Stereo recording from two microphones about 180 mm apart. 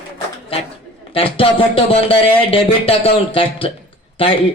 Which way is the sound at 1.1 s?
30° left (ahead or behind).